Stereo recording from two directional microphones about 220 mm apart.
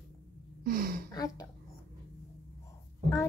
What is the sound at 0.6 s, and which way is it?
Speech, 40° right (ahead or behind).